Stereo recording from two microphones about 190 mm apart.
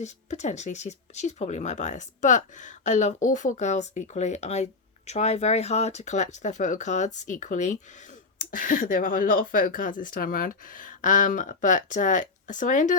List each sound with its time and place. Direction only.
0.0 s speech: 40° left (ahead or behind)